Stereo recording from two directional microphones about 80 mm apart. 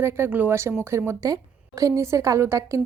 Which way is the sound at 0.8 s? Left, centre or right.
Right.